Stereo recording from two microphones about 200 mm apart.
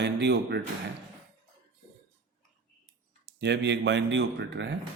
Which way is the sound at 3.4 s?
60° right (ahead or behind).